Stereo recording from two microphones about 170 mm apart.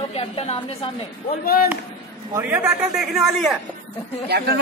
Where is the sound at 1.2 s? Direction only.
60° left (ahead or behind).